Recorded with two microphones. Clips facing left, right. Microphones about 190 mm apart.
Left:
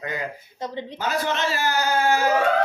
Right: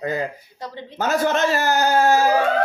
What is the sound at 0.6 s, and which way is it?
Speech, 20° left (ahead or behind).